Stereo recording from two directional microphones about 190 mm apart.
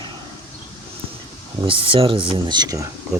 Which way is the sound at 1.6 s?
30° right (ahead or behind).